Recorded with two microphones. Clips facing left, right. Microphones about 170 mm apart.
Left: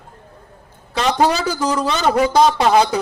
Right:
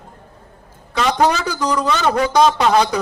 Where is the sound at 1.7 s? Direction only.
25° left (ahead or behind).